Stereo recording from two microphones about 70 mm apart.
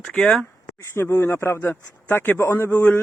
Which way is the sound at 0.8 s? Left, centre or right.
Left.